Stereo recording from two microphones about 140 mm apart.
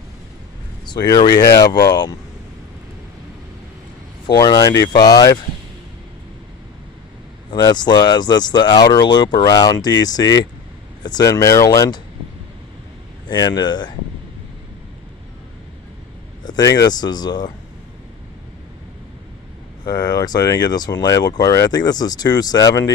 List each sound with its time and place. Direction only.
0.8 s speech: 30° left (ahead or behind)
4.3 s speech: 30° left (ahead or behind)
7.5 s speech: 30° left (ahead or behind)
13.3 s speech: 30° left (ahead or behind)
16.4 s speech: 25° left (ahead or behind)
19.9 s speech: 30° left (ahead or behind)